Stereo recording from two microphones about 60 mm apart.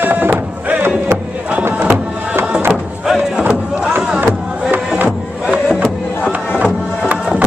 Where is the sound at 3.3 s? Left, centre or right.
Centre.